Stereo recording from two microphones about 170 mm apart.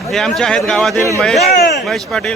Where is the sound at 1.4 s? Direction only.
70° left (ahead or behind).